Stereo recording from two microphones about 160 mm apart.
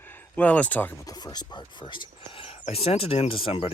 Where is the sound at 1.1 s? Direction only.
25° left (ahead or behind).